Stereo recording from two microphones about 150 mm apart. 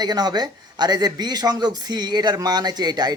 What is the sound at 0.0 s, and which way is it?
A man's voice, 25° right (ahead or behind).